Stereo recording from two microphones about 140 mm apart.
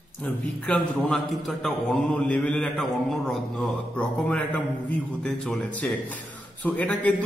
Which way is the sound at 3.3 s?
10° left (ahead or behind).